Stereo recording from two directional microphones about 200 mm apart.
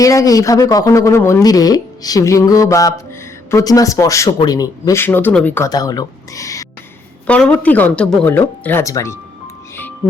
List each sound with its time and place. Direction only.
0.0 s speech: 15° left (ahead or behind)
7.3 s speech: 5° left (ahead or behind)